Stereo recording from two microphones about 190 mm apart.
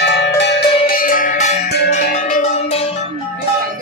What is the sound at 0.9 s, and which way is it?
Music, 45° left (ahead or behind).